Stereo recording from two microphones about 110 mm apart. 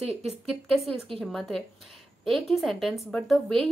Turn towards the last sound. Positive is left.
turn(degrees=0)  # may be behind; listen again after turning